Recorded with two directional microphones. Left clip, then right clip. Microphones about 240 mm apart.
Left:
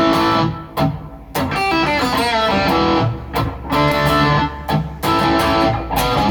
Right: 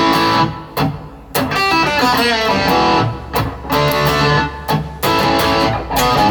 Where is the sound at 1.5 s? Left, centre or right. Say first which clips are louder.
Right 2 dB; right.